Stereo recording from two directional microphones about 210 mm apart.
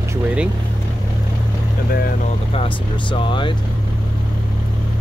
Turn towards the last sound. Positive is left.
turn(degrees=25)  # may be behind; listen again after turning